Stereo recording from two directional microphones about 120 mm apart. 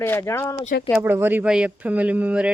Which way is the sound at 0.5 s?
55° left (ahead or behind).